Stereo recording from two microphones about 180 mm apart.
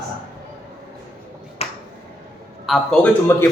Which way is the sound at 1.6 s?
35° left (ahead or behind).